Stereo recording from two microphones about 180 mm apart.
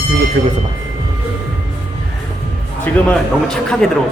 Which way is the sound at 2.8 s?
5° left (ahead or behind).